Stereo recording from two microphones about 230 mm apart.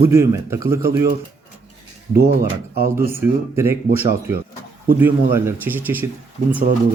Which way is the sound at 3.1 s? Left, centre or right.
Centre.